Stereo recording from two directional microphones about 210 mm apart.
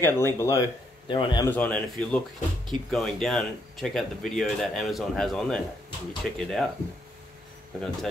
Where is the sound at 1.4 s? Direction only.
5° left (ahead or behind).